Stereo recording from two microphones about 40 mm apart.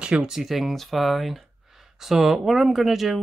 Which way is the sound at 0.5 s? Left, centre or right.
Centre.